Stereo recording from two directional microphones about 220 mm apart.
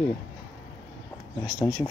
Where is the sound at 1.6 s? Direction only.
15° left (ahead or behind).